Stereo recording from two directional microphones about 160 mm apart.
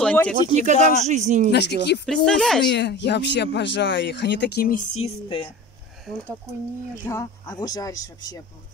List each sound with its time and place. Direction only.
0.0 s a sound: 10° left (ahead or behind)
0.5 s speech: 45° right (ahead or behind)
1.5 s speech: 90° left
2.0 s speech: 5° left (ahead or behind)
2.7 s speech: 90° left
4.9 s speech: 35° left (ahead or behind)
7.1 s speech: 20° left (ahead or behind)